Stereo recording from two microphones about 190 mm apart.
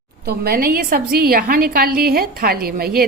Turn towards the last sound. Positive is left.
turn(degrees=-50)  # may be behind; listen again after turning